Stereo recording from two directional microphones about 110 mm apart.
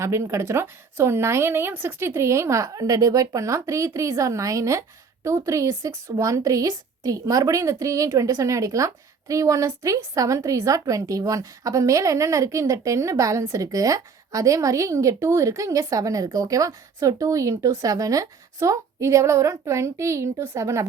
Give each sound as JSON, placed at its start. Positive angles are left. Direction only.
{"t": 0.0, "sound": "a woman's voice", "side_deg": -25}